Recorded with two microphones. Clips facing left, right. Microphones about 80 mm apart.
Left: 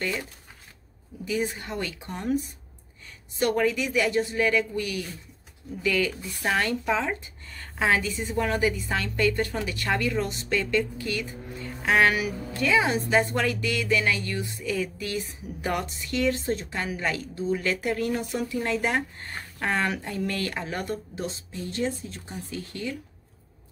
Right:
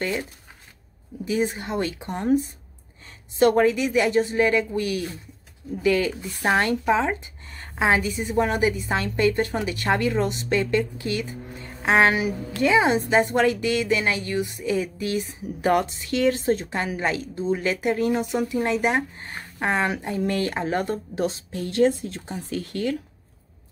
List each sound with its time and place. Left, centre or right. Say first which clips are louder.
0.0 s speech: right 3 dB; right
15.7 s speech: right 7 dB; right
21.1 s speech: right 8 dB; right